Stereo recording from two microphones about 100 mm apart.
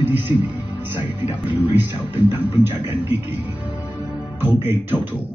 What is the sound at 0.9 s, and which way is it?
A man's voice, 20° right (ahead or behind).